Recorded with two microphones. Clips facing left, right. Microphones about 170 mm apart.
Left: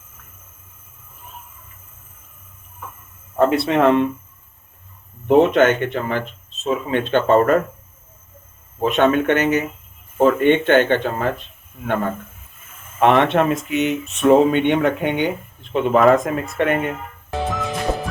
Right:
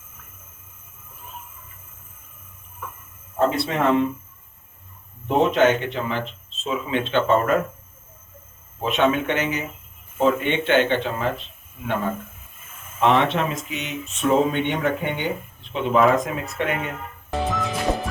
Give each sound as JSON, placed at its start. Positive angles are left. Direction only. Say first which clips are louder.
{"t": 3.3, "sound": "speech", "louder": "left 5 dB", "side_deg": 70}
{"t": 5.4, "sound": "speech", "louder": "left 2 dB", "side_deg": 60}
{"t": 8.8, "sound": "speech", "louder": "left 4 dB", "side_deg": 50}
{"t": 13.0, "sound": "speech", "louder": "left 4 dB", "side_deg": 60}
{"t": 15.7, "sound": "speech", "louder": "left 4 dB", "side_deg": 50}
{"t": 17.3, "sound": "music", "louder": "left 1 dB", "side_deg": 0}